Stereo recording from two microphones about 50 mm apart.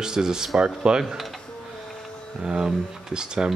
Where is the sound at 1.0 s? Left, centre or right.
Centre.